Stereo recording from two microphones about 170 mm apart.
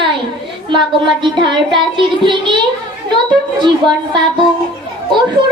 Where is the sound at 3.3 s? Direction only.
25° right (ahead or behind).